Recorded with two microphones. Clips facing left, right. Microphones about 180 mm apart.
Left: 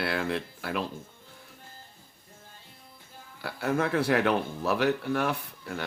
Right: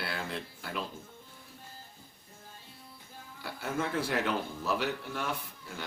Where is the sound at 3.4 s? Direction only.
65° left (ahead or behind).